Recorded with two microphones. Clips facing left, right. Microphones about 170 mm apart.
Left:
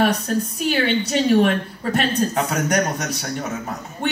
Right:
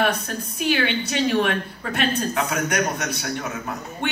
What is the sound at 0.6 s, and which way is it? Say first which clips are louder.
A woman's voice: right 1 dB; 40° left (ahead or behind).